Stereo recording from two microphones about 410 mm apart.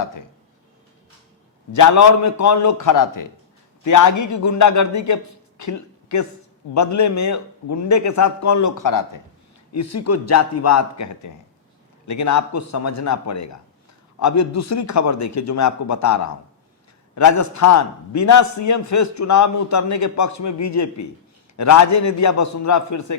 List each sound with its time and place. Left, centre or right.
1.7 s a man's voice: left
9.7 s a man's voice: left